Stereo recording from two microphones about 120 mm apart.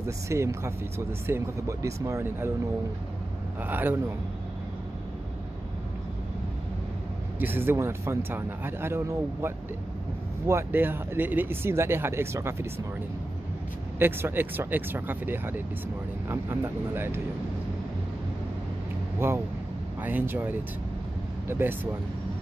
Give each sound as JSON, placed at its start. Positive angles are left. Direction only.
{"t": 0.0, "sound": "speech", "side_deg": -25}
{"t": 3.6, "sound": "speech", "side_deg": -15}
{"t": 7.3, "sound": "speech", "side_deg": -15}
{"t": 13.9, "sound": "speech", "side_deg": -20}
{"t": 19.1, "sound": "speech", "side_deg": -20}